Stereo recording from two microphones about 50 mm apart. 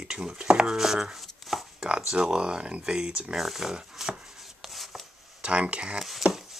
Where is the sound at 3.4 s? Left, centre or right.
Centre.